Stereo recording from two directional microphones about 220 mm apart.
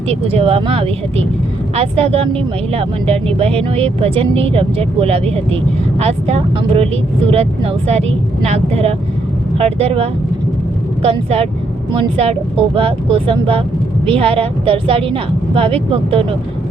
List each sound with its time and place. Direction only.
0.1 s speech: 25° right (ahead or behind)